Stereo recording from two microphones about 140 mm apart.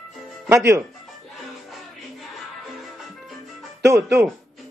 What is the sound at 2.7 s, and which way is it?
Music, centre (ahead or behind).